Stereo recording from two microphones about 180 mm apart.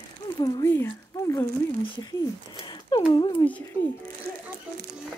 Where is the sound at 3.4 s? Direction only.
20° left (ahead or behind).